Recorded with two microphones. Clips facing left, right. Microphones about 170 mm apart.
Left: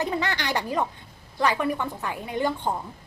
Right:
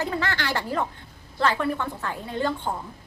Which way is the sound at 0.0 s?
20° left (ahead or behind).